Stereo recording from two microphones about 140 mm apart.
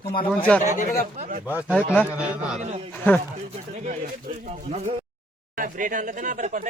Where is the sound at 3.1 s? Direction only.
15° left (ahead or behind).